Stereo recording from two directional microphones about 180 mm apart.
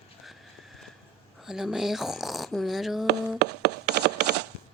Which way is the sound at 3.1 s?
65° right (ahead or behind).